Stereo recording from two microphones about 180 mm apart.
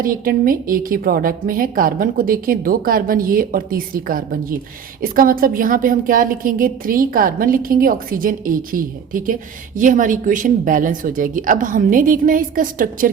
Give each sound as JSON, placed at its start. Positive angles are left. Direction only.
{"t": 0.0, "sound": "a woman's voice", "side_deg": -50}